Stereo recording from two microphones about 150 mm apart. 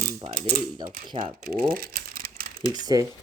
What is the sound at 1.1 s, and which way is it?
Speech, 30° right (ahead or behind).